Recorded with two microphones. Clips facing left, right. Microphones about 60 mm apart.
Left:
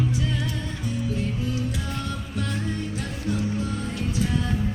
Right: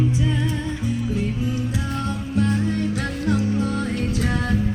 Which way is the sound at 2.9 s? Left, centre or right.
Right.